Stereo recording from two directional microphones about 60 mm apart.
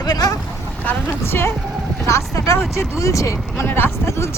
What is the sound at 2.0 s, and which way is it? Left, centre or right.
Speech, left.